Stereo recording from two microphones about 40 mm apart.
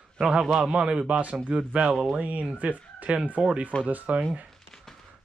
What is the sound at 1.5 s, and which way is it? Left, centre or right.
Speech, right.